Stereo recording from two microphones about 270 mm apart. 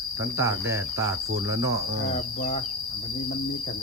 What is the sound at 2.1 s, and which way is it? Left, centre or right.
Insect, left.